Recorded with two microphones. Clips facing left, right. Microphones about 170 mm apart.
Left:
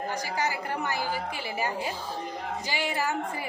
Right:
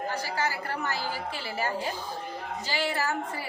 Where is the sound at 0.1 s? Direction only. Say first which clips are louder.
Left 2 dB; 15° left (ahead or behind).